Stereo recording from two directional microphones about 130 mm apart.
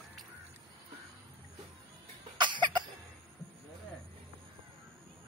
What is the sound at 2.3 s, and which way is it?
Cough, 35° right (ahead or behind).